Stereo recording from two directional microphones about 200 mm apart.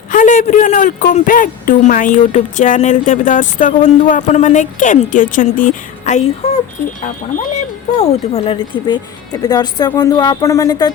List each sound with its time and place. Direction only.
0.1 s a man's voice: 40° left (ahead or behind); by 10.9 s 20° left (ahead or behind)